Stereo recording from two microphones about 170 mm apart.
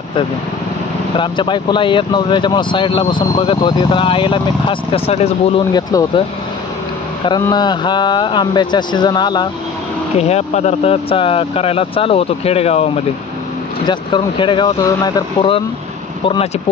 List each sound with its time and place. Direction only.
1.1 s speech: 30° left (ahead or behind)
5.7 s speech: 25° left (ahead or behind)
7.2 s speech: 25° left (ahead or behind)
10.1 s speech: 40° left (ahead or behind)